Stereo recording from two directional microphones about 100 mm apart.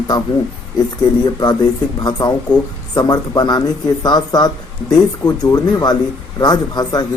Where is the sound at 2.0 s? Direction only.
45° left (ahead or behind).